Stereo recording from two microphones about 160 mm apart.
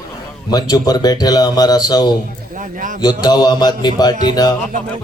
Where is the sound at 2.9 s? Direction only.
25° left (ahead or behind).